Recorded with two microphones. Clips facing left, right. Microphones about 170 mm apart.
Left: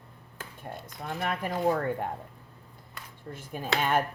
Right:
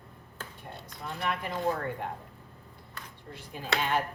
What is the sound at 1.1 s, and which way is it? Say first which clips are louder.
Speech: left 2 dB; 45° left (ahead or behind).